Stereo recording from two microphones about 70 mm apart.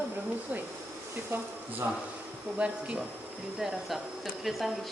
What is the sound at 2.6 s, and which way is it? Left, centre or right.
Speech, centre.